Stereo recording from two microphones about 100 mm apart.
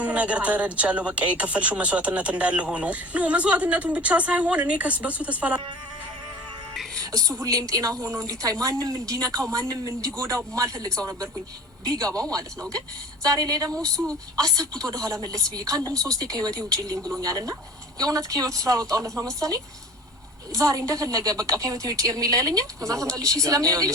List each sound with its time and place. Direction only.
0.0 s speech: 15° right (ahead or behind)
6.9 s a woman's voice: 35° right (ahead or behind)
15.9 s speech: 10° left (ahead or behind)
16.2 s a woman's voice: 35° right (ahead or behind)